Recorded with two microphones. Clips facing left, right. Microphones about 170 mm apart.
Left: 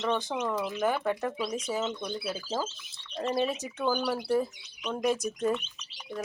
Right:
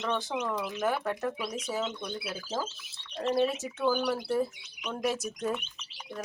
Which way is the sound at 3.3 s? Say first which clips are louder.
Right 2 dB; centre (ahead or behind).